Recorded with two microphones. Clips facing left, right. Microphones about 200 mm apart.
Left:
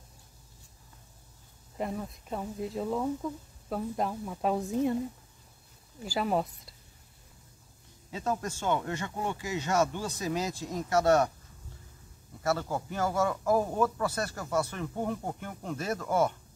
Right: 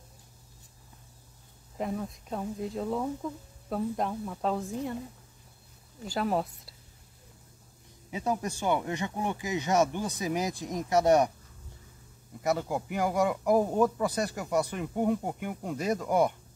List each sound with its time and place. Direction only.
1.8 s speech: centre (ahead or behind); by 4.9 s 15° left (ahead or behind)
6.0 s speech: centre (ahead or behind)
8.1 s speech: 15° right (ahead or behind)
12.4 s speech: 15° right (ahead or behind)